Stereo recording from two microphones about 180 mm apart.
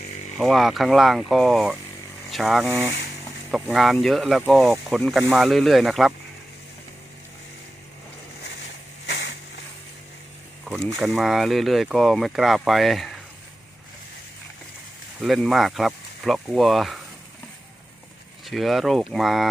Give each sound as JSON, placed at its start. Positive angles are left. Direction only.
{"t": 0.3, "sound": "speech", "side_deg": 0}
{"t": 9.0, "sound": "a sound", "side_deg": 70}
{"t": 10.7, "sound": "speech", "side_deg": 0}
{"t": 15.2, "sound": "speech", "side_deg": 0}
{"t": 18.4, "sound": "speech", "side_deg": 0}